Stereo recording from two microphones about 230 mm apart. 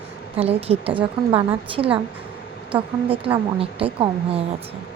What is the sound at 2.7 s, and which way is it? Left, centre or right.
A woman's voice, right.